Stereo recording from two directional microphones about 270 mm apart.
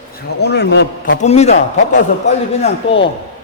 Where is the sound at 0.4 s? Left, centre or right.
Left.